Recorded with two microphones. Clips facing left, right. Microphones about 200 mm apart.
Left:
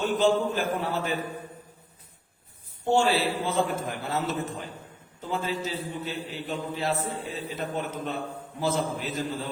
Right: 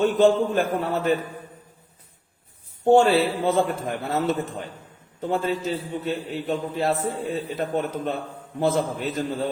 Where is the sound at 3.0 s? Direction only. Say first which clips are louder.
Right 5 dB; centre (ahead or behind).